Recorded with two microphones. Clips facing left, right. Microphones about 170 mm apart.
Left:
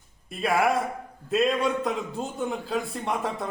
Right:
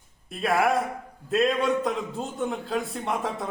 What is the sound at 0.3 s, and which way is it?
A man's voice, centre (ahead or behind).